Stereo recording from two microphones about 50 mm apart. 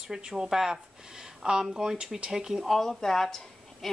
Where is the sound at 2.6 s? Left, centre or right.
Centre.